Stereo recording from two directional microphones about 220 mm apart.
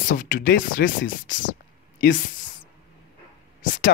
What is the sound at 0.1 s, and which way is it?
Speech, 40° left (ahead or behind).